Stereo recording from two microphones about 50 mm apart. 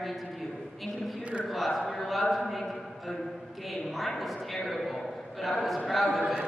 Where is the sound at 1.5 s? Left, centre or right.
Centre.